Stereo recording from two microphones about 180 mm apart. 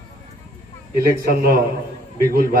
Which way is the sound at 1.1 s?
55° right (ahead or behind).